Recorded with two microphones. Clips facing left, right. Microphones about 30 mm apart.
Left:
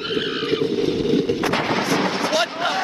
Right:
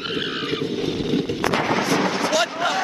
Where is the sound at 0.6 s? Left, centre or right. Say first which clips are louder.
Left 4 dB; left.